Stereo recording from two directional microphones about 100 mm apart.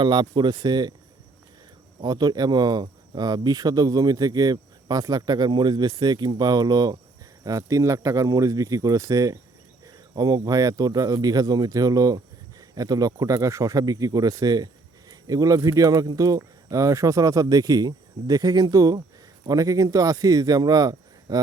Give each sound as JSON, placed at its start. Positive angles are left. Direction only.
{"t": 0.0, "sound": "speech", "side_deg": -50}
{"t": 2.0, "sound": "a man's voice", "side_deg": -45}